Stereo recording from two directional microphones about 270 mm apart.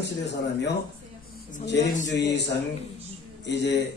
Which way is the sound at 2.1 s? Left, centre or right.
Left.